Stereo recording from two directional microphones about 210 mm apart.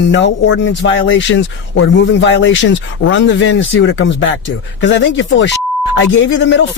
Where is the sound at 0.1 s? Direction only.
60° left (ahead or behind).